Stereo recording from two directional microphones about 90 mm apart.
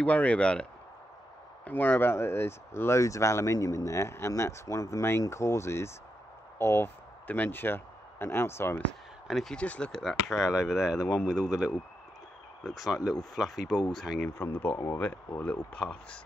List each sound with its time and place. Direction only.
0.0 s speech: 15° left (ahead or behind)
9.3 s speech: centre (ahead or behind)
14.4 s speech: 25° left (ahead or behind)